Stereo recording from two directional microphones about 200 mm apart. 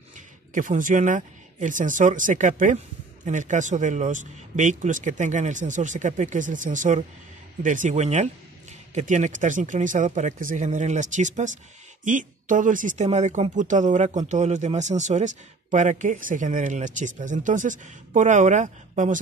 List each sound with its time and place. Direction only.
0.6 s speech: 40° right (ahead or behind)